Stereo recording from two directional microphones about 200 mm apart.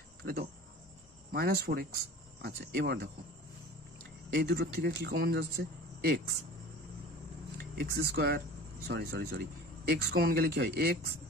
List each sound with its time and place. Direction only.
0.2 s speech: 50° right (ahead or behind)
4.4 s speech: 50° right (ahead or behind)
7.5 s speech: 55° right (ahead or behind)